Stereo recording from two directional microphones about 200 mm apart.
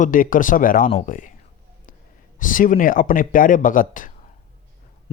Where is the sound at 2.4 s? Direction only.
40° left (ahead or behind).